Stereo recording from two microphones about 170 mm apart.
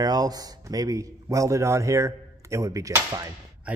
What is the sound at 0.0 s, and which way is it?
Speech, 20° right (ahead or behind).